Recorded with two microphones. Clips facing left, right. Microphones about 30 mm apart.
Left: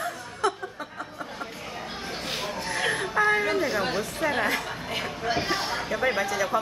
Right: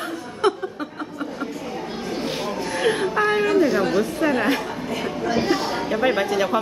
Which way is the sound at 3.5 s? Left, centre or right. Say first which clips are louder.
Right 8 dB; centre.